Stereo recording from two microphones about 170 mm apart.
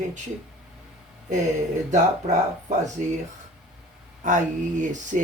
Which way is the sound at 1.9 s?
45° right (ahead or behind).